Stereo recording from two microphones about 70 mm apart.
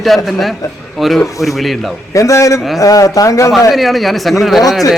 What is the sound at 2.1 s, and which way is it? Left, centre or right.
Speech, left.